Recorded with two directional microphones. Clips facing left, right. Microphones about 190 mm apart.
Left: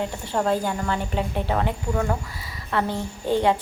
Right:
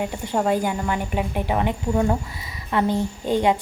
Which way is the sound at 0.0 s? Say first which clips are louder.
Right 2 dB; 10° right (ahead or behind).